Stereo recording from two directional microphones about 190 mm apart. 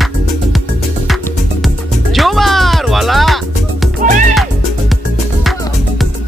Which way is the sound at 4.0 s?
40° right (ahead or behind).